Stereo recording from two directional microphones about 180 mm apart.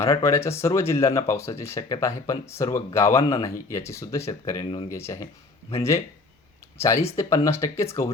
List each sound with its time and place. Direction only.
0.0 s speech: 15° left (ahead or behind)
4.6 s speech: 30° left (ahead or behind)
4.9 s speech: 15° left (ahead or behind)
6.7 s speech: 15° left (ahead or behind)